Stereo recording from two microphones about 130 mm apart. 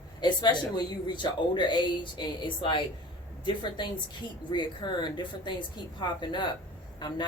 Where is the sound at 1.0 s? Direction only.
35° left (ahead or behind).